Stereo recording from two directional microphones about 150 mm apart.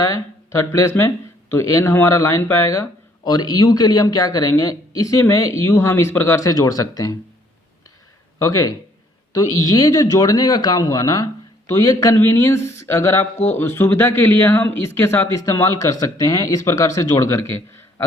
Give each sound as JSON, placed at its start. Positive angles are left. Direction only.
{"t": 0.0, "sound": "speech", "side_deg": 20}
{"t": 8.4, "sound": "speech", "side_deg": 20}